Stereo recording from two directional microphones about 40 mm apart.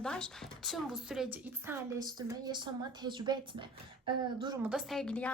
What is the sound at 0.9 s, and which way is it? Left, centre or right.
Speech, centre.